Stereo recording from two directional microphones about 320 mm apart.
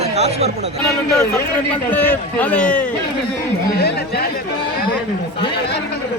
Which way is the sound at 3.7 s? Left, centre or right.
Left.